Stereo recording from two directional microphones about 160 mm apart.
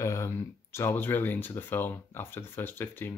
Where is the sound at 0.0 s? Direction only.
15° left (ahead or behind).